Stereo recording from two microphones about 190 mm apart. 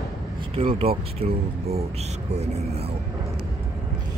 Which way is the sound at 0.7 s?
30° right (ahead or behind).